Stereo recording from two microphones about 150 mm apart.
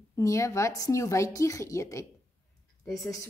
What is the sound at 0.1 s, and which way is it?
Speech, 20° left (ahead or behind).